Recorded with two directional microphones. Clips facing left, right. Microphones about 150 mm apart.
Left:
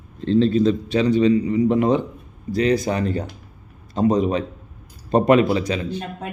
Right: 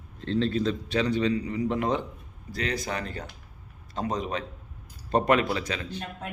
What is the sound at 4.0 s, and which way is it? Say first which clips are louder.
A man's voice: left 11 dB; 15° left (ahead or behind).